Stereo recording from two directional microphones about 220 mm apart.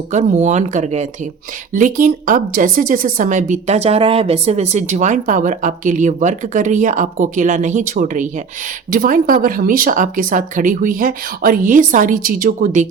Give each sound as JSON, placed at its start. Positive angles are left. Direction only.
{"t": 0.1, "sound": "speech", "side_deg": -35}